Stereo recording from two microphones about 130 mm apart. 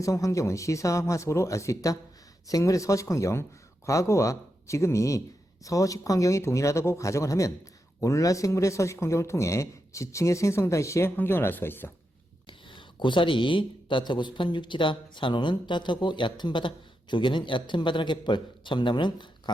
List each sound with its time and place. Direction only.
0.0 s speech: 25° left (ahead or behind)
12.5 s speech: 40° left (ahead or behind)